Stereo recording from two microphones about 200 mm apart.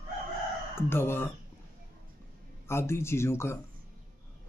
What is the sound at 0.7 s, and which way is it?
Speech, 10° left (ahead or behind).